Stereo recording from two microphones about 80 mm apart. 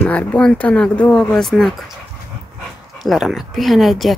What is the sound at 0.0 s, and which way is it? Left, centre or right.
Speech, centre.